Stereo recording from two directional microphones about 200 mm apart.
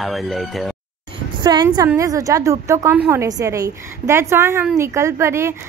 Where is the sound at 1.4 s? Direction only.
20° right (ahead or behind).